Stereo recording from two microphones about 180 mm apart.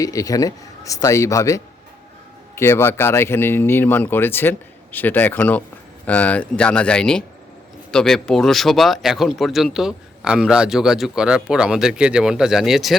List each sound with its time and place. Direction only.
0.0 s speech: 20° left (ahead or behind); by 13.0 s centre (ahead or behind)